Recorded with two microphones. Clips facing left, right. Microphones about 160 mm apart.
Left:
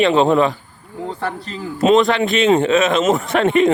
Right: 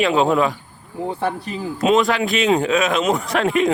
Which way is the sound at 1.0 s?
15° right (ahead or behind).